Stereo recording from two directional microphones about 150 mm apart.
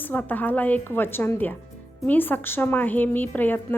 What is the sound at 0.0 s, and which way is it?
Speech, 10° left (ahead or behind).